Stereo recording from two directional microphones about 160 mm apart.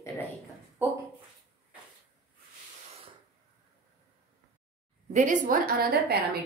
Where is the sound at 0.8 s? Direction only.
10° right (ahead or behind).